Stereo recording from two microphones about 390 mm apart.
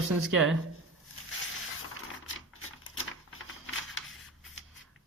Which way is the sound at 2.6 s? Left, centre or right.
Left.